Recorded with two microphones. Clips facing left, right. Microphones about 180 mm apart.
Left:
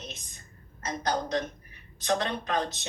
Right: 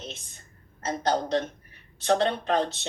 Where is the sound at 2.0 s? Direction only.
35° right (ahead or behind).